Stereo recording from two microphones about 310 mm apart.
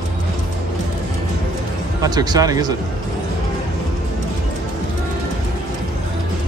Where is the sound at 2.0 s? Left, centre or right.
Centre.